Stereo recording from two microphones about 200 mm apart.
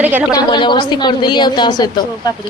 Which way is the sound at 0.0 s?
10° right (ahead or behind).